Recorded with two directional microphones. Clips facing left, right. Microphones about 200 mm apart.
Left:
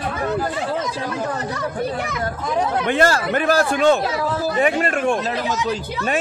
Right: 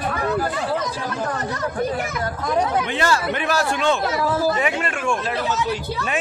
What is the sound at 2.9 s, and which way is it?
A man's voice, 45° left (ahead or behind).